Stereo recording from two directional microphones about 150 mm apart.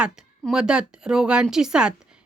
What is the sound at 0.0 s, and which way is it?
A woman's voice, 5° right (ahead or behind).